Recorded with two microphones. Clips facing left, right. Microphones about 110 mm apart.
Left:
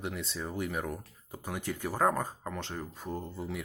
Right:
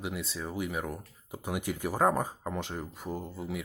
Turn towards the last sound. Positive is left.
turn(degrees=0)  # may be behind; listen again after turning